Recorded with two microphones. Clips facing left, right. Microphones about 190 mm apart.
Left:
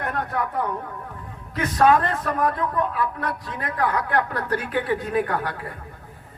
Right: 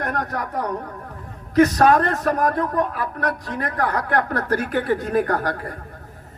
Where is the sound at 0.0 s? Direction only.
40° right (ahead or behind).